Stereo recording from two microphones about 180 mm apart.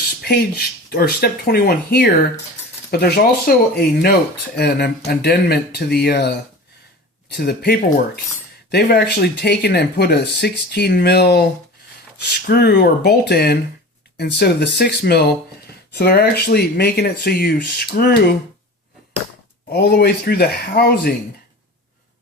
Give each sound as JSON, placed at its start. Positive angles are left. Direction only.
{"t": 0.2, "sound": "speech", "side_deg": 60}
{"t": 19.7, "sound": "speech", "side_deg": 65}